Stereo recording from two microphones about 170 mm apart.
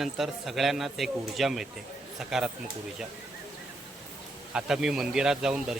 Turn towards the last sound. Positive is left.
turn(degrees=-5)  # may be behind; listen again after turning